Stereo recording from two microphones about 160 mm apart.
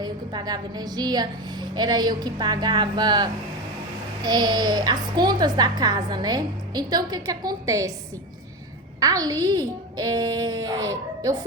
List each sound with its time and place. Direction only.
0.0 s a child's voice: 25° right (ahead or behind)
9.0 s a child's voice: 20° right (ahead or behind)